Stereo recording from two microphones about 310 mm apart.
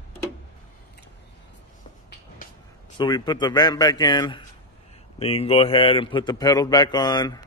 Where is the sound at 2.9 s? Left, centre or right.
Centre.